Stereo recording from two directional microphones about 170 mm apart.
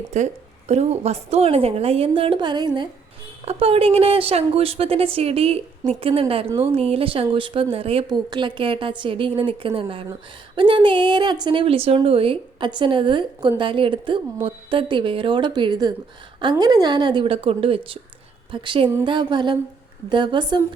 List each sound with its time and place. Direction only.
0.1 s a woman's voice: 45° right (ahead or behind); by 20.6 s 25° right (ahead or behind)